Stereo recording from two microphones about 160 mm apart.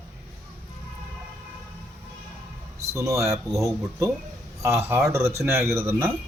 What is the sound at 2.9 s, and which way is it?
Speech, 20° right (ahead or behind).